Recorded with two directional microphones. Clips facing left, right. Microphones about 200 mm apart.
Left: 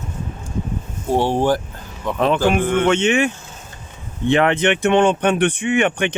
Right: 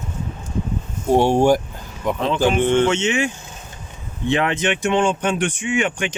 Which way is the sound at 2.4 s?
25° right (ahead or behind).